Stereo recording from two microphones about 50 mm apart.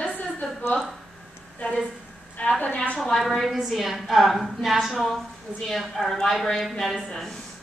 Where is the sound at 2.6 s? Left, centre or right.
Left.